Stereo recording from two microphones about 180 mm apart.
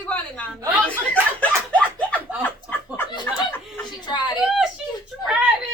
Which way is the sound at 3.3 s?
10° left (ahead or behind).